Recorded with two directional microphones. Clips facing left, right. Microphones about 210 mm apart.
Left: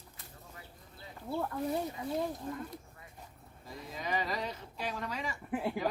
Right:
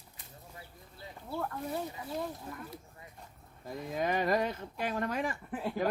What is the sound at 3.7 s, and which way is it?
Speech, 55° right (ahead or behind).